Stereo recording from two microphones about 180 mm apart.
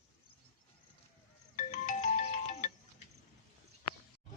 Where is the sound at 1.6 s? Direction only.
40° left (ahead or behind).